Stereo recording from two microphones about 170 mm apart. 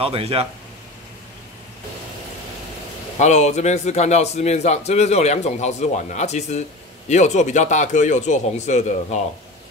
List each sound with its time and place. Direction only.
0.0 s speech: 35° right (ahead or behind)
3.2 s a man's voice: 40° left (ahead or behind)